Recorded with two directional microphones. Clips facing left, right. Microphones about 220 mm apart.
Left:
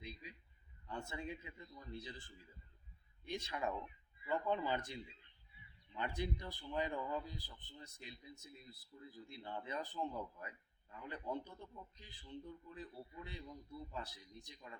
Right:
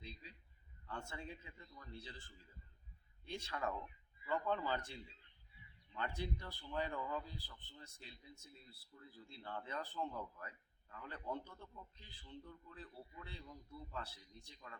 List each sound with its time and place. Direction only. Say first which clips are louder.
0.0 s a man's voice: left 3 dB; 15° left (ahead or behind)